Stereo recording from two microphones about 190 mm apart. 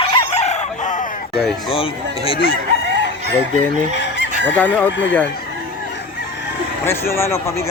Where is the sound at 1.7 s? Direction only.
30° left (ahead or behind).